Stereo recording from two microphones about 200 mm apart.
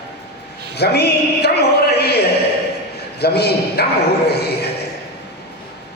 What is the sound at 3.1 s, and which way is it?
Speech, 55° left (ahead or behind).